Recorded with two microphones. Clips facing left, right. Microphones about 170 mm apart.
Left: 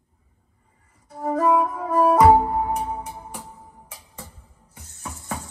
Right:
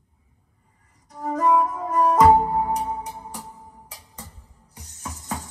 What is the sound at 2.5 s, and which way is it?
Music, 20° right (ahead or behind).